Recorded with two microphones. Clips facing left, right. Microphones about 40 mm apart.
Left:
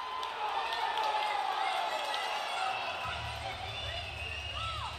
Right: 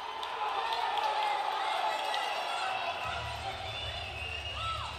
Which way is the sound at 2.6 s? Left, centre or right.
Right.